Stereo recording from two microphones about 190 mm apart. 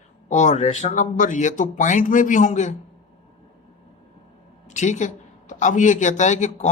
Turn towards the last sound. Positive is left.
turn(degrees=40)  # may be behind; listen again after turning